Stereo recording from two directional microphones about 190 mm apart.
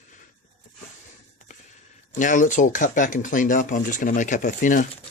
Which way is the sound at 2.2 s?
40° left (ahead or behind).